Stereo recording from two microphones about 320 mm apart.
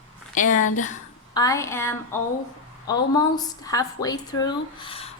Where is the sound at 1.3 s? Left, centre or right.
Centre.